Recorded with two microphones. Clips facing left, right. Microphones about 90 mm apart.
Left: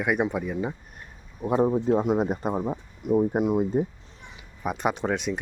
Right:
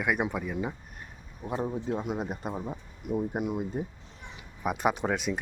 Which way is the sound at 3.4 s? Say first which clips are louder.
Left 8 dB; 40° left (ahead or behind).